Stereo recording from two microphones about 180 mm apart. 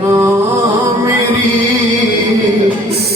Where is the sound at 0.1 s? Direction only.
20° right (ahead or behind).